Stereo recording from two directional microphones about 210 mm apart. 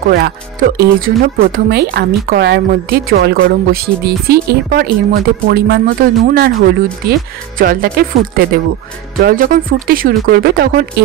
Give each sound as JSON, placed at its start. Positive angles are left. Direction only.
{"t": 0.1, "sound": "speech", "side_deg": -50}
{"t": 9.2, "sound": "speech", "side_deg": -40}